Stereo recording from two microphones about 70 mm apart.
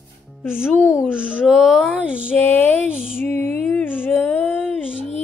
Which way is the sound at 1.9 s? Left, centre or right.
Centre.